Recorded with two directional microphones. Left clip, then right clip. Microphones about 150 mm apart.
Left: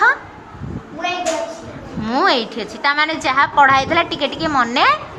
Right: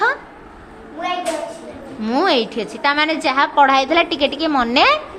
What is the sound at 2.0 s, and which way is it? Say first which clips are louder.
A woman's voice: left 1 dB; 35° right (ahead or behind).